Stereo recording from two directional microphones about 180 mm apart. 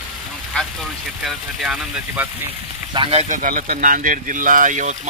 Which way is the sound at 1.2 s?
Centre (ahead or behind).